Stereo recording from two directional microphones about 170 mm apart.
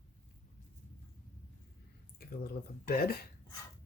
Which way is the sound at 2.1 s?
65° left (ahead or behind).